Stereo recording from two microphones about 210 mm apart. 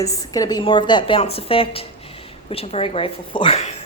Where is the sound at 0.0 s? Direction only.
15° left (ahead or behind).